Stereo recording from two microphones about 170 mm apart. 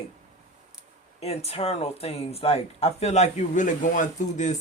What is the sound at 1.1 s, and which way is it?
Speech, 40° left (ahead or behind).